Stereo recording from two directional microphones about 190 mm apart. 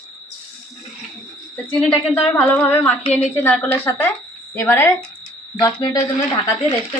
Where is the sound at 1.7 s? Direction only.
5° left (ahead or behind).